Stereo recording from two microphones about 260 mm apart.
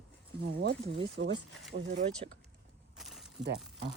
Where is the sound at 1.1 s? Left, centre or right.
Right.